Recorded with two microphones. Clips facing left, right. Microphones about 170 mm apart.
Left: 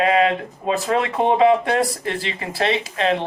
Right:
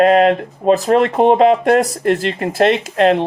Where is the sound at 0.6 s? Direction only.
40° right (ahead or behind).